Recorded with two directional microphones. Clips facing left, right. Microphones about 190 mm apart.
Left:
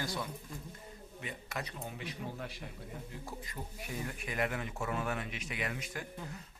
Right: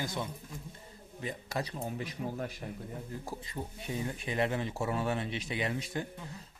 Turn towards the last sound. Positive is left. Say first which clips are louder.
# right 5 dB
turn(degrees=-30)  # may be behind; listen again after turning